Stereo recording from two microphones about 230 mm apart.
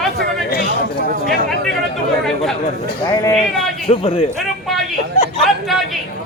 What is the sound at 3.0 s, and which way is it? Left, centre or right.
Speech, centre.